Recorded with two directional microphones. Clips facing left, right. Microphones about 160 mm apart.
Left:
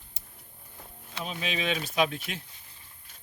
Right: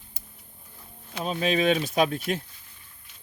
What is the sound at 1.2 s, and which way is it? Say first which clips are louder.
Speech: right 9 dB; 40° right (ahead or behind).